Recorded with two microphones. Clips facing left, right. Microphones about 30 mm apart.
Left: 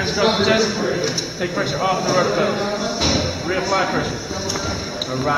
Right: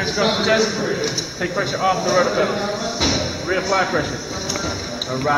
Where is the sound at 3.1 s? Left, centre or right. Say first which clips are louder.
Even; centre.